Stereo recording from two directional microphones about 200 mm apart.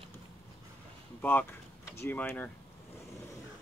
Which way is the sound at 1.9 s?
10° left (ahead or behind).